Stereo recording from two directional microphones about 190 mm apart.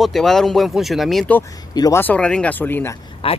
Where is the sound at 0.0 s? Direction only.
Centre (ahead or behind).